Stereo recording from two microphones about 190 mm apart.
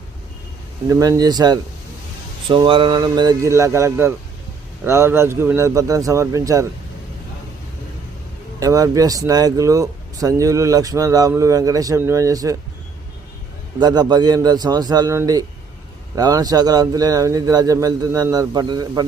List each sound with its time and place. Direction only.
0.9 s speech: 15° right (ahead or behind)
8.5 s speech: 20° right (ahead or behind)
13.7 s speech: 20° right (ahead or behind)